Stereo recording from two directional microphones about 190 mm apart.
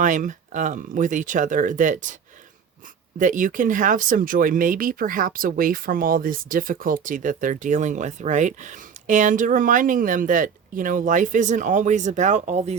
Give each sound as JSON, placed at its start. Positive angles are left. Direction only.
{"t": 0.0, "sound": "speech", "side_deg": -40}
{"t": 3.2, "sound": "speech", "side_deg": -45}